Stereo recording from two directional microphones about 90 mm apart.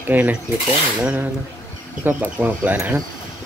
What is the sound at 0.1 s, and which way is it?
Speech, 15° right (ahead or behind).